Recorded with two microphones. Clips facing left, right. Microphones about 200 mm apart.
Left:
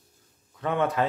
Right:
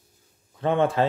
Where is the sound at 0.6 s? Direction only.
30° right (ahead or behind).